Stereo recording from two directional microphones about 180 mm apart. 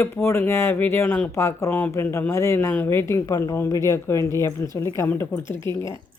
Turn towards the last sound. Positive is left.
turn(degrees=15)  # may be behind; listen again after turning